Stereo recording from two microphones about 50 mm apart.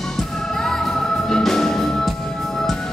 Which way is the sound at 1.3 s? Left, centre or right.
Centre.